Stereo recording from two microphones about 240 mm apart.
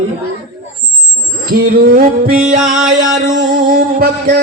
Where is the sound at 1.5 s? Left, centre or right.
Right.